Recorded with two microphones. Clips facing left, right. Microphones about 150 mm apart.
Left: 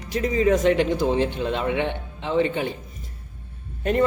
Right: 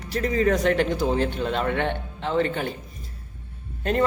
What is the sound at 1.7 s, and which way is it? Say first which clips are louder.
Speech: left 1 dB; 55° right (ahead or behind).